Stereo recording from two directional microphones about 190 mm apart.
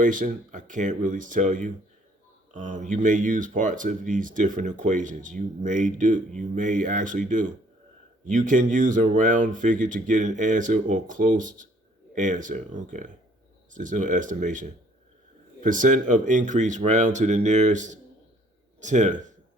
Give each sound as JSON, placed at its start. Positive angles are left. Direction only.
{"t": 0.0, "sound": "speech", "side_deg": -45}
{"t": 8.3, "sound": "speech", "side_deg": -40}